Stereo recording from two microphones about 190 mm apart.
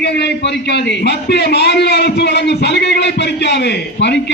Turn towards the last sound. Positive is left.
turn(degrees=65)  # may be behind; listen again after turning